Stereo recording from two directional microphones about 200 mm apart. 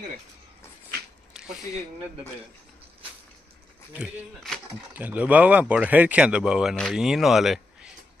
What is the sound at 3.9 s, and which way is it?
Speech, centre (ahead or behind).